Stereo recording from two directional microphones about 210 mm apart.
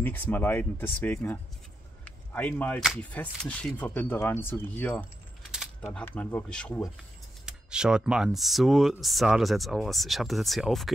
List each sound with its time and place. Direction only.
0.0 s speech: 10° left (ahead or behind)
5.5 s keys jangling: centre (ahead or behind)
5.9 s speech: 10° left (ahead or behind)